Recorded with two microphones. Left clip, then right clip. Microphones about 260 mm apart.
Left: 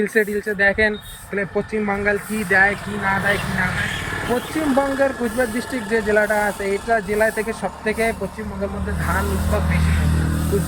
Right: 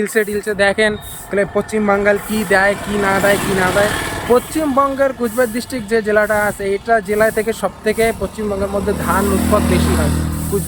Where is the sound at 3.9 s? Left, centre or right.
Centre.